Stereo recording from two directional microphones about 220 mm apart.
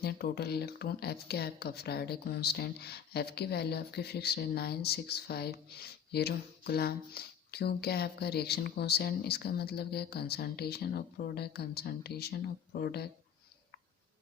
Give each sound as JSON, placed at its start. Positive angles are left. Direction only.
{"t": 0.0, "sound": "speech", "side_deg": 45}